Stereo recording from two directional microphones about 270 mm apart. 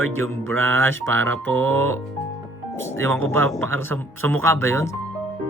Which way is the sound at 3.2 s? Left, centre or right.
Right.